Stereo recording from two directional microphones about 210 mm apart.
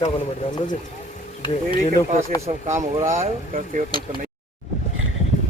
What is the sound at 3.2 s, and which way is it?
Speech, 40° right (ahead or behind).